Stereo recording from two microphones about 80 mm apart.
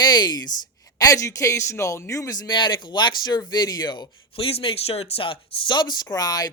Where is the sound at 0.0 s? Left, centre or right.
Left.